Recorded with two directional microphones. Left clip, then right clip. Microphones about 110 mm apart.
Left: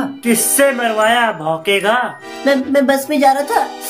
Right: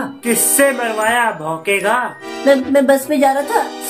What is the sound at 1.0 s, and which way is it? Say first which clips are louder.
Speech: left 2 dB; 30° left (ahead or behind).